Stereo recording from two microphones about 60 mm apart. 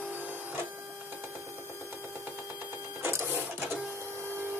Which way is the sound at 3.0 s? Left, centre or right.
Right.